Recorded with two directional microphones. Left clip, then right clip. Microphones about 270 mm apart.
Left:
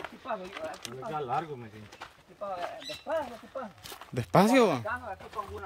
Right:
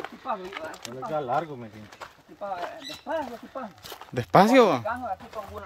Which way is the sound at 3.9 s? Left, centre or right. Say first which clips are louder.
Right 6 dB; centre.